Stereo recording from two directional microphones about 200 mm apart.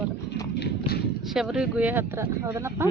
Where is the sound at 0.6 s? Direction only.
50° left (ahead or behind).